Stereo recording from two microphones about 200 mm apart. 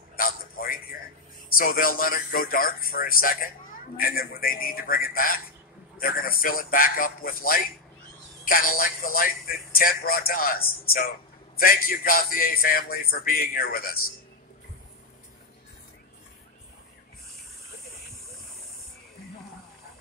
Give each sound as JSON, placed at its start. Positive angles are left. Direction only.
{"t": 0.1, "sound": "a man's voice", "side_deg": 45}